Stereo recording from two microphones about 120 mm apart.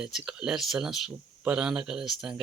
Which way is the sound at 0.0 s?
5° right (ahead or behind).